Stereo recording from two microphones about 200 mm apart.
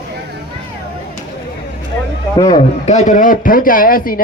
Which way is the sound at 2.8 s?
35° left (ahead or behind).